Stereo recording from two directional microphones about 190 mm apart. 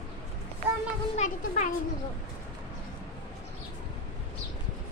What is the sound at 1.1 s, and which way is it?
Speech, 40° left (ahead or behind).